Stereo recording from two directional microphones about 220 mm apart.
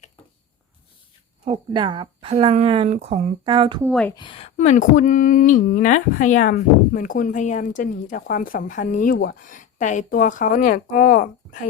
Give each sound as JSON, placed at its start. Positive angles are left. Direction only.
{"t": 1.5, "sound": "speech", "side_deg": -20}
{"t": 4.1, "sound": "speech", "side_deg": 20}